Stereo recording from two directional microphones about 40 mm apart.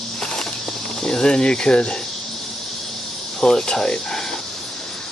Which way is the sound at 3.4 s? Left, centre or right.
Centre.